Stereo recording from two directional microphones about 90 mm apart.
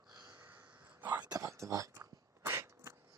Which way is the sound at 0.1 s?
40° right (ahead or behind).